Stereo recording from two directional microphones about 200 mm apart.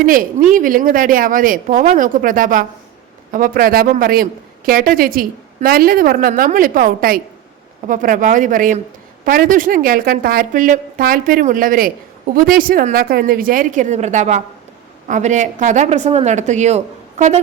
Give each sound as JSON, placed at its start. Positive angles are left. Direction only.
{"t": 0.0, "sound": "a woman's voice", "side_deg": -45}